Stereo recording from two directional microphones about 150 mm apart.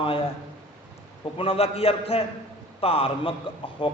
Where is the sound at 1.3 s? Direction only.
40° left (ahead or behind).